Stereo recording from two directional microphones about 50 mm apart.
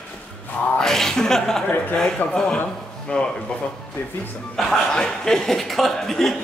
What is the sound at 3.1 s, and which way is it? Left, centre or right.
Speech, left.